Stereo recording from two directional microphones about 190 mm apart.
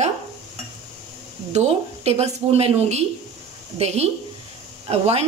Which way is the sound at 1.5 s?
35° right (ahead or behind).